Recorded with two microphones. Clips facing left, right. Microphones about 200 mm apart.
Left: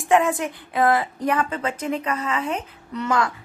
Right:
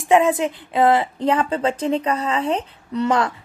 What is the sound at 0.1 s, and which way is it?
A woman's voice, 20° right (ahead or behind).